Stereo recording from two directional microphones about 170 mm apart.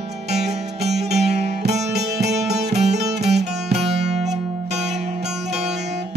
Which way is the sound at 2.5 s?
40° right (ahead or behind).